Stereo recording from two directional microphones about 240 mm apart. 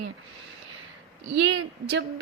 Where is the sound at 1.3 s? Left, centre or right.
Right.